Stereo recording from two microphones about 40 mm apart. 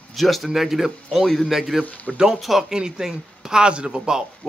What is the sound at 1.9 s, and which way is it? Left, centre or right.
Speech, left.